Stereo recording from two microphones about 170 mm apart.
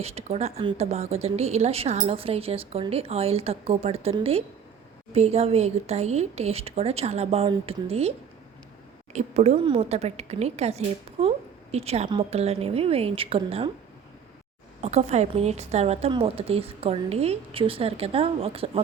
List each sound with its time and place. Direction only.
0.0 s speech: 35° right (ahead or behind)
9.1 s speech: 40° right (ahead or behind)
14.8 s speech: 40° right (ahead or behind)